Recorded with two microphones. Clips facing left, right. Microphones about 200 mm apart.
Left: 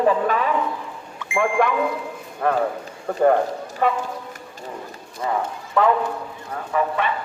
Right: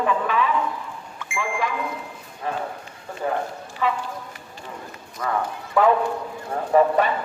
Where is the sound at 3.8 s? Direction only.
50° left (ahead or behind).